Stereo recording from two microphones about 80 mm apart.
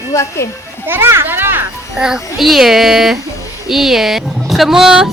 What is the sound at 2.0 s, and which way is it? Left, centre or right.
Speech, centre.